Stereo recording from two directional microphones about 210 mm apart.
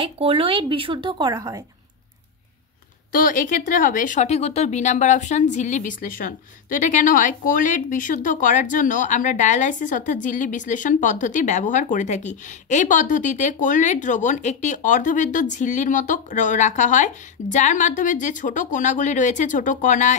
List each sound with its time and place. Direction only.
0.0 s speech: 25° right (ahead or behind)
3.1 s speech: 40° left (ahead or behind)